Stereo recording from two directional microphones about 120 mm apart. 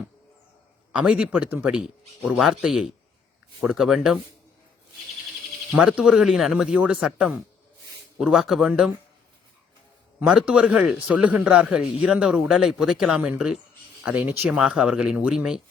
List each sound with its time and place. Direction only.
0.9 s a man's voice: 10° right (ahead or behind)
5.7 s speech: 5° right (ahead or behind)
10.2 s a man's voice: 5° right (ahead or behind)